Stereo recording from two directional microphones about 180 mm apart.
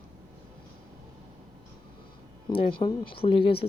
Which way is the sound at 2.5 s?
30° left (ahead or behind).